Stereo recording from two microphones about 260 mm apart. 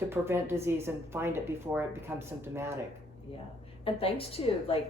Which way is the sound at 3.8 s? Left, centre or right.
Left.